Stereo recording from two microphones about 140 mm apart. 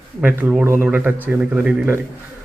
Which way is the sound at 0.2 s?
15° right (ahead or behind).